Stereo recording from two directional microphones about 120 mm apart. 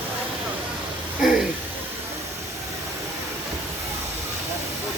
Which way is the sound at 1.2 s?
5° right (ahead or behind).